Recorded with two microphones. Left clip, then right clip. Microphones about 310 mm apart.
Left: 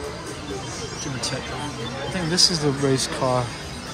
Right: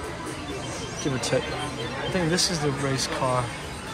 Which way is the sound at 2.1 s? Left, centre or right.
Centre.